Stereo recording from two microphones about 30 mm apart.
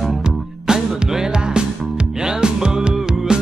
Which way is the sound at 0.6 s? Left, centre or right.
Right.